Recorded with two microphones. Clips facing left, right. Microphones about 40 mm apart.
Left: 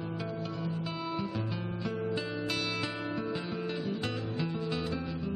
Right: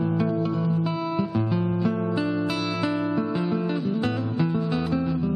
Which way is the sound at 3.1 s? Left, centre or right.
Centre.